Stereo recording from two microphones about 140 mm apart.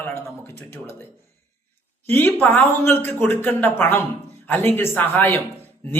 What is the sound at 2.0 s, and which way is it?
Speech, 15° left (ahead or behind).